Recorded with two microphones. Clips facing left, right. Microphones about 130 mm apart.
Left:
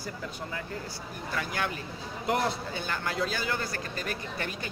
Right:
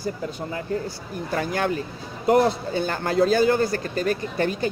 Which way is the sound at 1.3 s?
40° right (ahead or behind).